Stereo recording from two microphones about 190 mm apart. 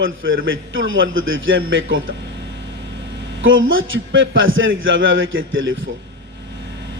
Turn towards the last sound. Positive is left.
turn(degrees=-90)